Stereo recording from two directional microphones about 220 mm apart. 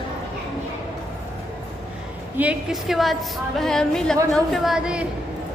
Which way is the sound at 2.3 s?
5° right (ahead or behind).